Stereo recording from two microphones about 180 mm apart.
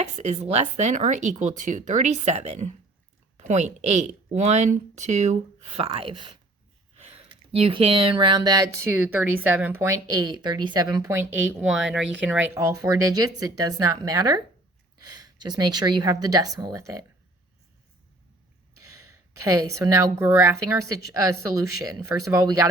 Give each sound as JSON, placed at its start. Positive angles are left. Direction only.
{"t": 0.0, "sound": "a woman's voice", "side_deg": -35}
{"t": 19.4, "sound": "a woman's voice", "side_deg": -15}